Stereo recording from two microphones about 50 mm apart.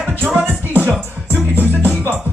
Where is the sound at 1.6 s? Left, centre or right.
Left.